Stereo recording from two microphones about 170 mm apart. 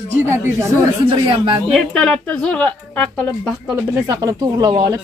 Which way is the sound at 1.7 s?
5° left (ahead or behind).